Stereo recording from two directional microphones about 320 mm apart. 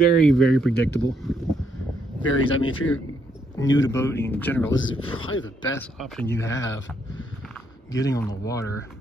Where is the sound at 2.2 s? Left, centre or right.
Left.